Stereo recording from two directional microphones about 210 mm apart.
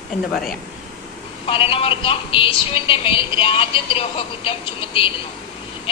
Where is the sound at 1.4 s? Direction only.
25° left (ahead or behind).